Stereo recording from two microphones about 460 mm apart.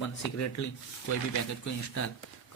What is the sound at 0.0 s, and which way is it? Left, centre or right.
Speech, left.